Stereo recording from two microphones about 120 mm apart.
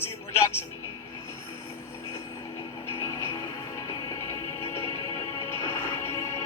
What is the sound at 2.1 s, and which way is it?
Music, 25° left (ahead or behind).